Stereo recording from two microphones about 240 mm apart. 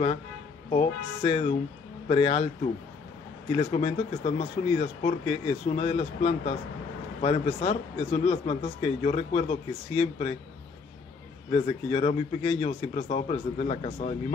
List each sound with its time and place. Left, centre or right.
0.7 s a man's voice: left
3.5 s a man's voice: left
11.5 s a man's voice: left